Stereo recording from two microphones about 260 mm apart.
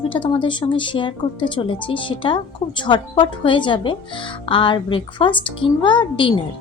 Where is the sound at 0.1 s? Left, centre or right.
Centre.